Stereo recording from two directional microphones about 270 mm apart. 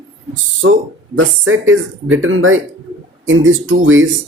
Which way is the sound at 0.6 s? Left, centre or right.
Right.